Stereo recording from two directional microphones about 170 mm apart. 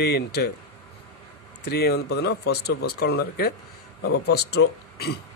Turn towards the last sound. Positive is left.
turn(degrees=75)  # may be behind; listen again after turning